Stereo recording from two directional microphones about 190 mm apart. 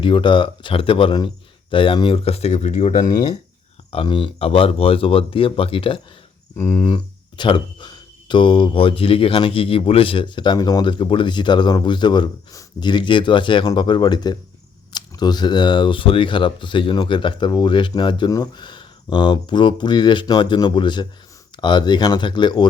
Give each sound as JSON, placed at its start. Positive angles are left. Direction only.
{"t": 0.0, "sound": "speech", "side_deg": 25}
{"t": 2.9, "sound": "speech", "side_deg": 20}